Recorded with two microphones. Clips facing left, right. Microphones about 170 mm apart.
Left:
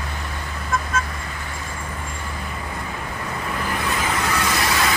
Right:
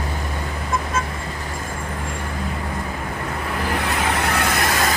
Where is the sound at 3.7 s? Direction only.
65° right (ahead or behind); by 4.9 s 45° right (ahead or behind).